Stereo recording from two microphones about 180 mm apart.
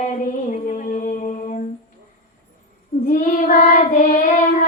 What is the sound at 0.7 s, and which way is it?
Music, 45° left (ahead or behind).